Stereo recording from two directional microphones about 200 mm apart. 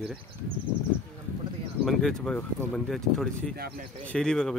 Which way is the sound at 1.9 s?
Centre (ahead or behind).